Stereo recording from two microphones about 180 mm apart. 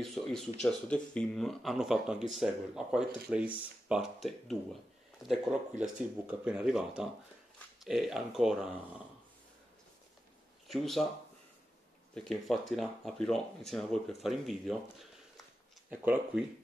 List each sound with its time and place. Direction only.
0.0 s speech: centre (ahead or behind)
10.7 s speech: centre (ahead or behind)
12.1 s speech: centre (ahead or behind)